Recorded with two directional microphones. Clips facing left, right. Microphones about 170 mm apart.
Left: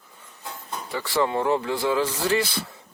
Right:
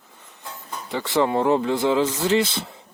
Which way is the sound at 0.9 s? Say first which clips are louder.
Right 3 dB; 20° right (ahead or behind).